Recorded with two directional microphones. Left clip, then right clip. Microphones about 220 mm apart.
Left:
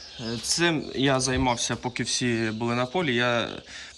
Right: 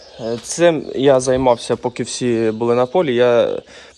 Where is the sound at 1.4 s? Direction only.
10° left (ahead or behind).